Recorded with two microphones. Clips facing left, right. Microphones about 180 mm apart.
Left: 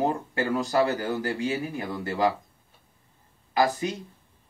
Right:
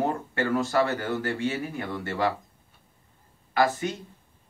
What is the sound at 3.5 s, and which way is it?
Speech, 20° left (ahead or behind).